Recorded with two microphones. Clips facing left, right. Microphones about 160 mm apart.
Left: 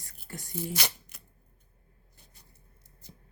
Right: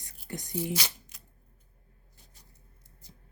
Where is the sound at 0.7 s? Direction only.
55° left (ahead or behind).